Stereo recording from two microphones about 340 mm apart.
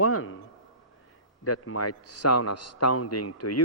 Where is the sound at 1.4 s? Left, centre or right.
Left.